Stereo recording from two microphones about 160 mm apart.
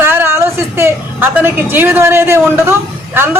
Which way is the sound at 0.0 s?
15° right (ahead or behind).